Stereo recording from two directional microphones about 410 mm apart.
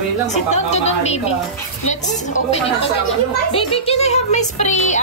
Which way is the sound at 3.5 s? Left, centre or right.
Centre.